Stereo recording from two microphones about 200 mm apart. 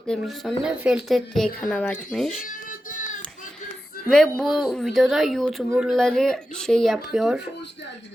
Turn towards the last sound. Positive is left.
turn(degrees=-5)  # may be behind; listen again after turning